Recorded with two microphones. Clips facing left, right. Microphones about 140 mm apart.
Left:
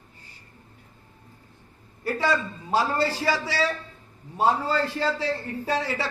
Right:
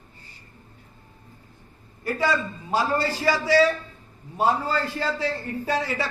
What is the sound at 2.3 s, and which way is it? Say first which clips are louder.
A man's voice: left 1 dB; 30° left (ahead or behind).